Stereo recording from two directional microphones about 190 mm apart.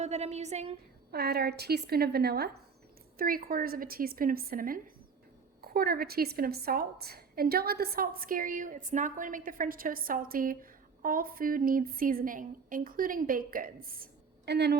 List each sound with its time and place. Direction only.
0.0 s a woman's voice: 35° right (ahead or behind)
1.1 s a woman's voice: 55° right (ahead or behind)